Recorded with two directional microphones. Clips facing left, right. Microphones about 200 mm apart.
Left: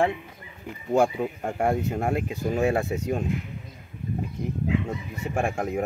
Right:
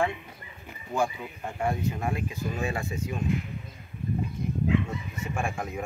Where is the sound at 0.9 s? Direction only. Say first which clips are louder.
Left 7 dB; 80° left.